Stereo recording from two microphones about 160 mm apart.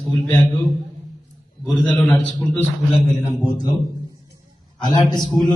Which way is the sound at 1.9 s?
10° left (ahead or behind).